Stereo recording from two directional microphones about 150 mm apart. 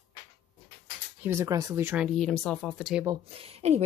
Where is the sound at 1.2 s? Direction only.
20° right (ahead or behind).